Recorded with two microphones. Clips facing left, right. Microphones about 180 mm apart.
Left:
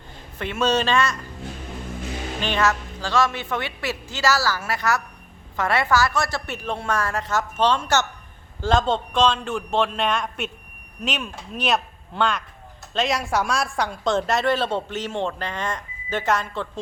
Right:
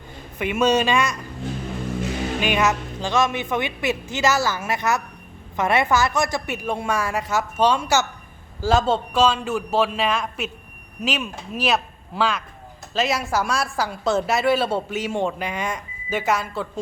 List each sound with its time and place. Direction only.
0.3 s a woman's voice: 15° right (ahead or behind)
2.4 s a woman's voice: 15° right (ahead or behind)